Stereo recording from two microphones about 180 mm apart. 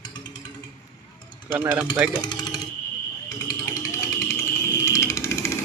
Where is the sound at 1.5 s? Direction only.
10° right (ahead or behind).